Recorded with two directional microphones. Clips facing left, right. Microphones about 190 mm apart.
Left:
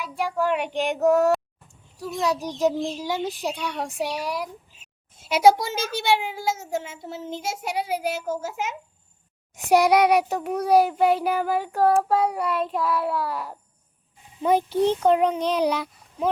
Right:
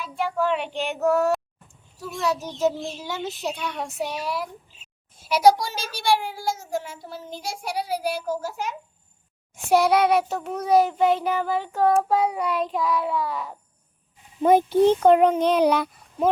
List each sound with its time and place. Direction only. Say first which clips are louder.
0.0 s child singing: even; 10° left (ahead or behind)
5.2 s a child's voice: even; 25° left (ahead or behind)
9.6 s child singing: left 1 dB; 15° left (ahead or behind)
14.4 s a child's voice: right 4 dB; 50° right (ahead or behind)